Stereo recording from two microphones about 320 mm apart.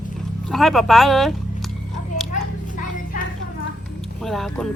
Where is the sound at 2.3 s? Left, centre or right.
Left.